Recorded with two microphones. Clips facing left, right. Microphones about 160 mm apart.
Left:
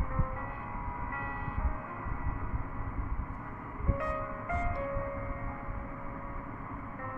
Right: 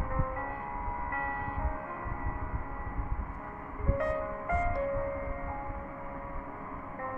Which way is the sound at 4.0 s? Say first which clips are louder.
Right 4 dB; 50° right (ahead or behind).